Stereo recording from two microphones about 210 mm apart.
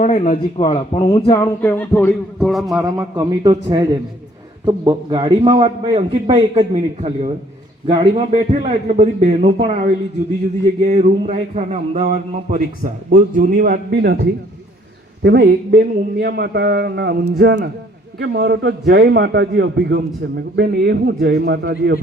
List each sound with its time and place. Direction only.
0.0 s speech: 35° left (ahead or behind)
0.6 s speech: 20° left (ahead or behind); by 2.8 s centre (ahead or behind)
2.8 s a man's voice: 15° right (ahead or behind)
10.8 s a man's voice: 30° right (ahead or behind); by 22.0 s 55° right (ahead or behind)